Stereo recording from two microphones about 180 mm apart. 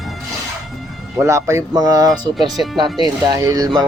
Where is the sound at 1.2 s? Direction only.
15° right (ahead or behind).